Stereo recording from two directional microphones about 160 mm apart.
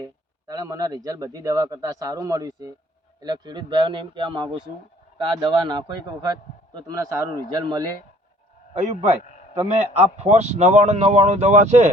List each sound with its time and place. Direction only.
0.0 s a man's voice: 20° right (ahead or behind)
8.7 s speech: 45° right (ahead or behind)